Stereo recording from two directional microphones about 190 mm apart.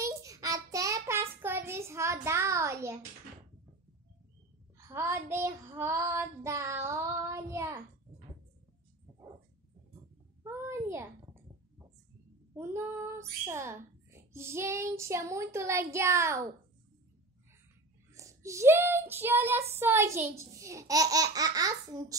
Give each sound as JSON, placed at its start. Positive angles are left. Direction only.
{"t": 0.0, "sound": "child singing", "side_deg": -15}
{"t": 1.4, "sound": "a sound", "side_deg": -10}
{"t": 4.7, "sound": "a child's voice", "side_deg": -15}
{"t": 10.4, "sound": "a sound", "side_deg": -15}
{"t": 12.5, "sound": "a child's voice", "side_deg": -15}
{"t": 18.1, "sound": "a child's voice", "side_deg": -15}